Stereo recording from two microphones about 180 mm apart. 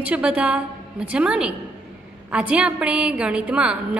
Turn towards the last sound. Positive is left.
turn(degrees=-5)  # may be behind; listen again after turning